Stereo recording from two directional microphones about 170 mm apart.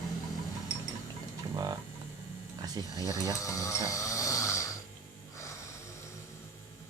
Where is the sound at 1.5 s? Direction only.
25° right (ahead or behind).